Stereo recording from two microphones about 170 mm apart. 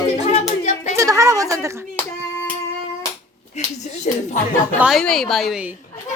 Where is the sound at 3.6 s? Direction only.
40° left (ahead or behind).